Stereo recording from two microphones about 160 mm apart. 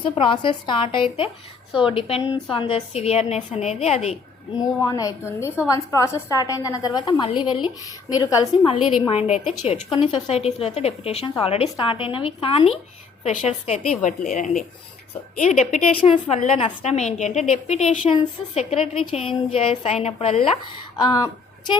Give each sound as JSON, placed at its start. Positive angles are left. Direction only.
{"t": 0.0, "sound": "a woman's voice", "side_deg": 30}
{"t": 4.8, "sound": "a woman's voice", "side_deg": 20}
{"t": 9.0, "sound": "a woman's voice", "side_deg": 40}
{"t": 15.4, "sound": "a woman's voice", "side_deg": 45}
{"t": 21.0, "sound": "a woman's voice", "side_deg": 25}